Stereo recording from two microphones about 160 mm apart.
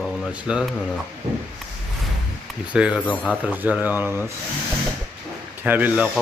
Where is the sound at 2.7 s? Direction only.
5° right (ahead or behind).